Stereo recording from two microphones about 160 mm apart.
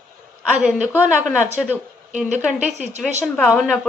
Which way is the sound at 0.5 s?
10° right (ahead or behind).